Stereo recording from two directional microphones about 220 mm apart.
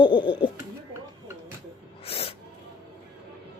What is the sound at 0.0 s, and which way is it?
Speech, 20° left (ahead or behind).